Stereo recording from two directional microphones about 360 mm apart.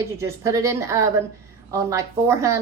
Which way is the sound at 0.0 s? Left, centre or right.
Centre.